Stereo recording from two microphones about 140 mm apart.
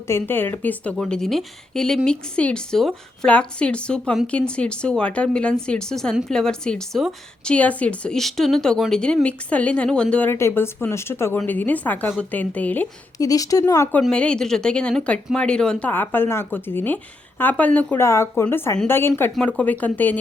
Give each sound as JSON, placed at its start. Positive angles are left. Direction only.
{"t": 0.1, "sound": "a woman's voice", "side_deg": 15}
{"t": 13.1, "sound": "speech", "side_deg": 25}
{"t": 14.0, "sound": "a woman's voice", "side_deg": 5}
{"t": 18.0, "sound": "a woman's voice", "side_deg": 20}